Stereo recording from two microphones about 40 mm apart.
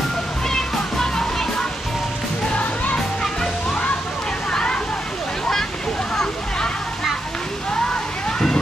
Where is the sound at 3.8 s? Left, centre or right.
Left.